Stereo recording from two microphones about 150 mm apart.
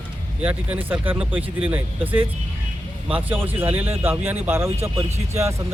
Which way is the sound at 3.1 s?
10° right (ahead or behind).